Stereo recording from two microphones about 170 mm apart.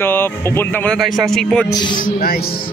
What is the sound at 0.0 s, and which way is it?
A man's voice, 15° left (ahead or behind).